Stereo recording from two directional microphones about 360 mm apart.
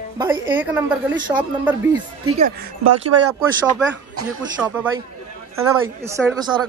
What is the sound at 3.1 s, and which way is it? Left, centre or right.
Speech, right.